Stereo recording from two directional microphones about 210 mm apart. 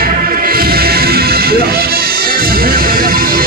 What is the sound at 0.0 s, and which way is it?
Music, 45° right (ahead or behind).